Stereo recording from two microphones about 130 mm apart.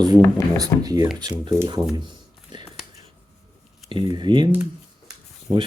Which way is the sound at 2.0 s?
35° right (ahead or behind).